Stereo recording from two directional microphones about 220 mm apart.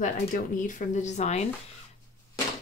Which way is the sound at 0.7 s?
35° left (ahead or behind).